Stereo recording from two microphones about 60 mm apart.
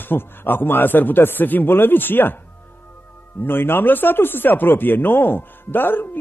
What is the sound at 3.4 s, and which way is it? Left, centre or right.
Speech, left.